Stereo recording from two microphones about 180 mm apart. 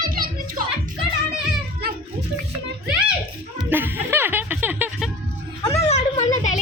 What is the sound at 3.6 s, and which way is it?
Music, 10° right (ahead or behind).